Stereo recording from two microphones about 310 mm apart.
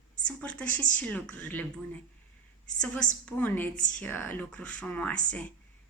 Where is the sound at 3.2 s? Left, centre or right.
Centre.